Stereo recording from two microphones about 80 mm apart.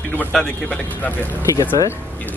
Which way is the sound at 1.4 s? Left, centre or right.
Left.